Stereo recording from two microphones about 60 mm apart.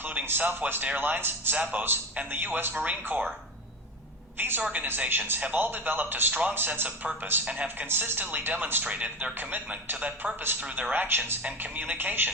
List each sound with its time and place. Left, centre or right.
0.3 s speech: right
2.7 s speech: right
4.4 s a woman's voice: right
8.8 s speech: right